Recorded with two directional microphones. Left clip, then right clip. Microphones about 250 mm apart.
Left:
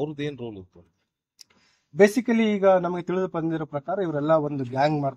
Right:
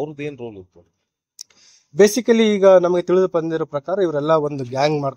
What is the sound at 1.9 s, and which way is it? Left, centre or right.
A man's voice, right.